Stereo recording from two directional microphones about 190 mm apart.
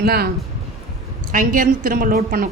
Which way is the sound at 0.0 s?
55° right (ahead or behind).